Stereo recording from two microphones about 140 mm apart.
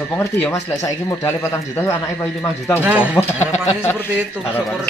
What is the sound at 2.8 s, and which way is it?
Speech, 10° right (ahead or behind).